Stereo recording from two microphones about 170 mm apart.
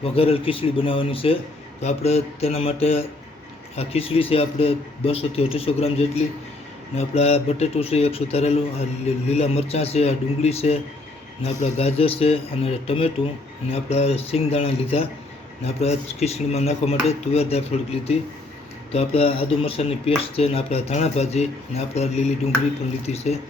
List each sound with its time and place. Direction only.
0.0 s speech: 35° left (ahead or behind)